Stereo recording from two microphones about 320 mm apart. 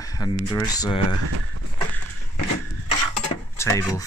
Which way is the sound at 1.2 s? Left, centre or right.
Right.